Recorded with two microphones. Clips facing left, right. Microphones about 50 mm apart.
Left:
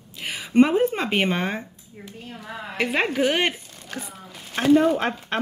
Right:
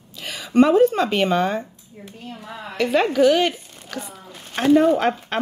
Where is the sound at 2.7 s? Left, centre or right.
Left.